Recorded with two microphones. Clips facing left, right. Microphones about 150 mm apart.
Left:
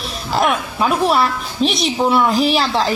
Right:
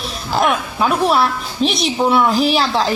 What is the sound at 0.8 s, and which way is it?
A woman's voice, centre (ahead or behind).